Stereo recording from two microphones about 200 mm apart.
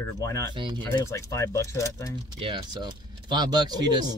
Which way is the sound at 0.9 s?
15° left (ahead or behind).